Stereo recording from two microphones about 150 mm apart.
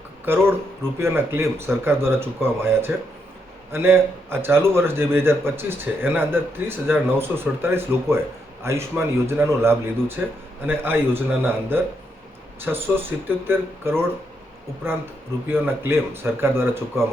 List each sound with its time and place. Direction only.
0.9 s a man's voice: 15° right (ahead or behind)